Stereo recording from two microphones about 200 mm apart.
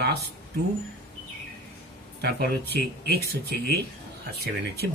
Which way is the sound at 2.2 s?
50° right (ahead or behind).